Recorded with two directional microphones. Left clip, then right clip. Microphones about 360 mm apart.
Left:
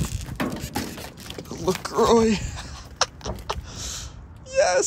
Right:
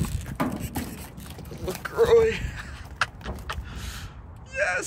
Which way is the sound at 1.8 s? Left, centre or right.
Centre.